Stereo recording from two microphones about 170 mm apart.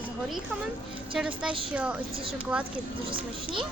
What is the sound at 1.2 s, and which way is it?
A woman's voice, 5° right (ahead or behind).